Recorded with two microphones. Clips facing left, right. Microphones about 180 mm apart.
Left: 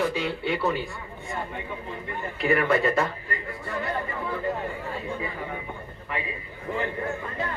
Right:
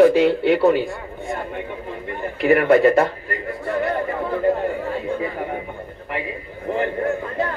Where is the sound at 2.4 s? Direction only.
55° right (ahead or behind).